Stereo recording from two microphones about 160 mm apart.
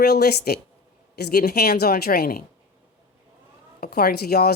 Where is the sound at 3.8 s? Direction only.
75° left (ahead or behind).